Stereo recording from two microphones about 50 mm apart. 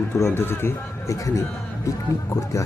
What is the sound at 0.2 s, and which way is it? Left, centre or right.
Speech, left.